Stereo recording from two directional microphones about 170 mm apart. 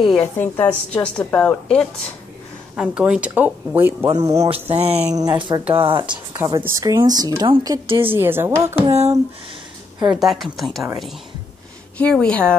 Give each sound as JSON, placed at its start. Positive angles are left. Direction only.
{"t": 0.2, "sound": "a woman's voice", "side_deg": 10}
{"t": 2.7, "sound": "speech", "side_deg": -5}
{"t": 4.6, "sound": "speech", "side_deg": -35}
{"t": 5.1, "sound": "a woman's voice", "side_deg": -25}
{"t": 6.3, "sound": "a woman's voice", "side_deg": -15}
{"t": 8.1, "sound": "speech", "side_deg": -15}
{"t": 10.1, "sound": "a woman's voice", "side_deg": 0}
{"t": 12.0, "sound": "a woman's voice", "side_deg": 5}